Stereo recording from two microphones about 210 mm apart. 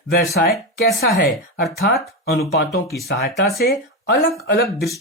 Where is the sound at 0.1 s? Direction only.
50° left (ahead or behind).